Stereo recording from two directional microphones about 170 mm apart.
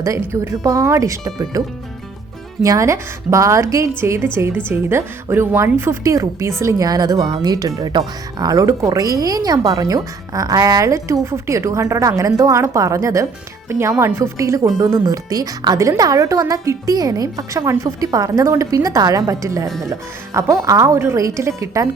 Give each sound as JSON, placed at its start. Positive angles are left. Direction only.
{"t": 0.0, "sound": "speech", "side_deg": -15}
{"t": 2.6, "sound": "speech", "side_deg": -20}